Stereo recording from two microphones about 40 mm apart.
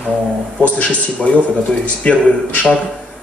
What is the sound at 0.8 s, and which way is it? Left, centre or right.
A man's voice, left.